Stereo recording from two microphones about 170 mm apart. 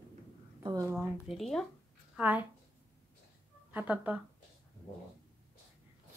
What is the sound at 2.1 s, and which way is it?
Speech, 10° right (ahead or behind).